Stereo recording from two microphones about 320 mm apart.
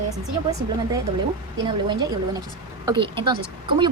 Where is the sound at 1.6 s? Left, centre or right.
Centre.